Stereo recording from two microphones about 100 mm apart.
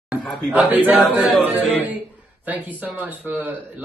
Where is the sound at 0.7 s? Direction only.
15° right (ahead or behind).